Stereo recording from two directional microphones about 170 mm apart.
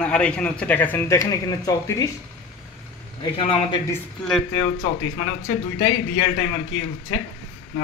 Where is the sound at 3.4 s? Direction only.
30° left (ahead or behind).